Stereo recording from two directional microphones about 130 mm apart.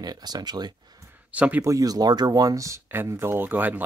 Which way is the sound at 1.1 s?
10° right (ahead or behind).